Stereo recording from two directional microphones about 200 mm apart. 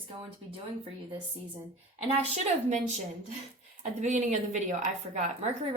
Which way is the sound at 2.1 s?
35° right (ahead or behind).